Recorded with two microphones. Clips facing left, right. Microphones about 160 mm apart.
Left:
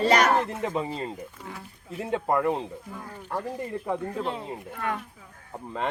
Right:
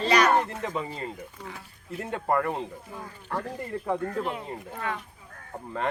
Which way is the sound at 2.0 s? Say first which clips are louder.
Left 1 dB; 15° left (ahead or behind).